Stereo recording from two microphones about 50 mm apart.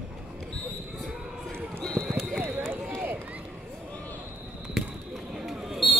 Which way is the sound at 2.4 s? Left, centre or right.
Right.